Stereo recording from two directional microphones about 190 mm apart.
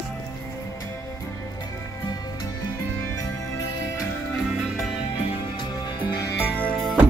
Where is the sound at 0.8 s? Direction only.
15° left (ahead or behind).